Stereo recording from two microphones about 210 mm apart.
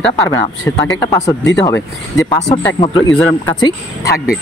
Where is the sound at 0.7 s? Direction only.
15° left (ahead or behind).